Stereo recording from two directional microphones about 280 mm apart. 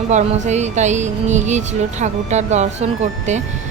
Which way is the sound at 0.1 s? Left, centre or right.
Right.